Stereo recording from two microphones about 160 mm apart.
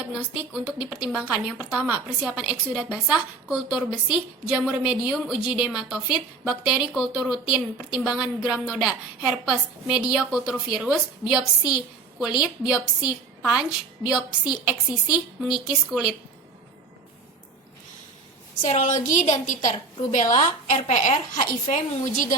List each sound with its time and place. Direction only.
0.3 s a woman's voice: 10° right (ahead or behind)
18.7 s a woman's voice: 50° left (ahead or behind)